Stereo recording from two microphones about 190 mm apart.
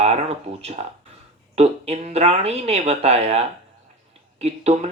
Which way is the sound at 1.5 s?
35° right (ahead or behind).